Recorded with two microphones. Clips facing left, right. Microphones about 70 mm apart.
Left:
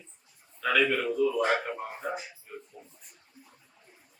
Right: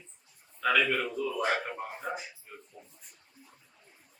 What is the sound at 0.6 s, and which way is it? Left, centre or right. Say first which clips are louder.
Speech: left 1 dB; centre.